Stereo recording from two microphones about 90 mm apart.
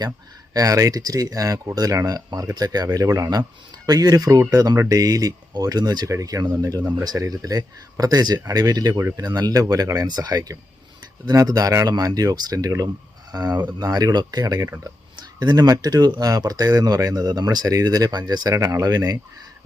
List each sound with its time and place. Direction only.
0.5 s speech: 40° right (ahead or behind)
9.0 s speech: 35° right (ahead or behind)